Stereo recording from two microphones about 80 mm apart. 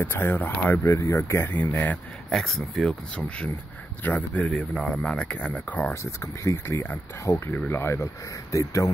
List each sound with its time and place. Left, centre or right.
0.0 s speech: left
0.8 s speech: left
1.4 s speech: left
2.2 s speech: centre
3.3 s speech: centre
4.5 s speech: centre
6.4 s speech: left